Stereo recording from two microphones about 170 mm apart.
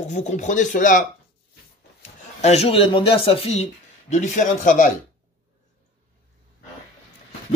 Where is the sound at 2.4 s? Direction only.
40° left (ahead or behind).